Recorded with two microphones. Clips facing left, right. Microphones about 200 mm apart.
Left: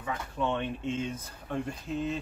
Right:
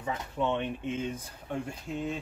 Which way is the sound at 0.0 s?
20° right (ahead or behind).